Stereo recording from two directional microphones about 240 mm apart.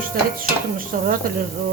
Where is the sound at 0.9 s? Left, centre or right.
Right.